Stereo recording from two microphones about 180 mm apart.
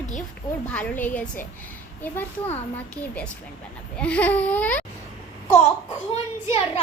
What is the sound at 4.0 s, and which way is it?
Baby cry, 5° left (ahead or behind).